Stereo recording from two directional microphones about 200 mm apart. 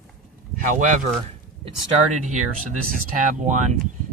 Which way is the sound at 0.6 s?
40° right (ahead or behind).